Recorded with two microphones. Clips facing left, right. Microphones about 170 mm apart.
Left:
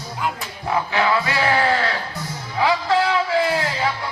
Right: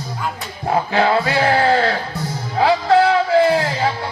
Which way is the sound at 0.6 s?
30° right (ahead or behind).